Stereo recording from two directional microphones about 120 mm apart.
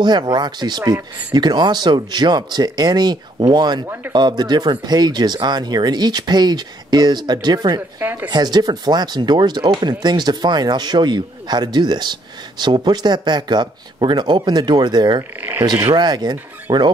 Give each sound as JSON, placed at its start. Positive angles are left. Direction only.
{"t": 0.0, "sound": "speech", "side_deg": -35}
{"t": 3.8, "sound": "a man's voice", "side_deg": -15}
{"t": 4.1, "sound": "speech", "side_deg": -40}
{"t": 8.0, "sound": "a man's voice", "side_deg": -15}
{"t": 8.3, "sound": "speech", "side_deg": -35}